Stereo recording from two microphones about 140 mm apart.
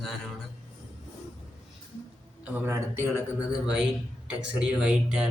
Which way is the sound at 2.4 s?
15° right (ahead or behind).